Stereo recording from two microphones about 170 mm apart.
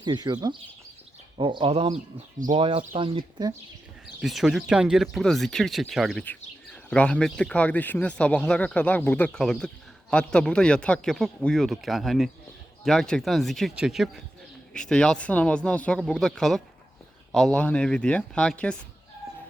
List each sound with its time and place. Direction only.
0.0 s speech: 25° right (ahead or behind)
4.0 s speech: centre (ahead or behind)